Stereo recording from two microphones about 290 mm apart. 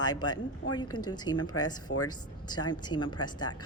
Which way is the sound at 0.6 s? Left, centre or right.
Left.